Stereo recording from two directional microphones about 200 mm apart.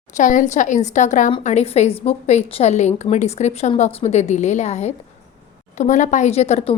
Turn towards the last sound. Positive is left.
turn(degrees=35)  # may be behind; listen again after turning